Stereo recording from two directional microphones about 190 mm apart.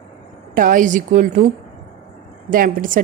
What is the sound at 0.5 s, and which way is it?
Speech, 45° right (ahead or behind).